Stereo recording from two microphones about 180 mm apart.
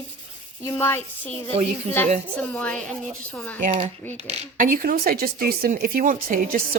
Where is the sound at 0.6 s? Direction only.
15° left (ahead or behind).